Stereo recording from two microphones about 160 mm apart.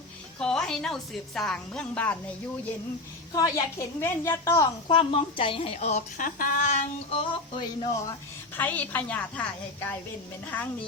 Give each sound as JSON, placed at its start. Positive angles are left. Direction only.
{"t": 0.3, "sound": "a woman's voice", "side_deg": 5}
{"t": 3.3, "sound": "a woman's voice", "side_deg": 20}
{"t": 8.5, "sound": "a woman's voice", "side_deg": 10}